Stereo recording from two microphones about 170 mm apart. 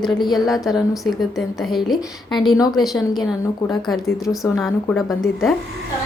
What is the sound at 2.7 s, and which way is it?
Speech, centre (ahead or behind).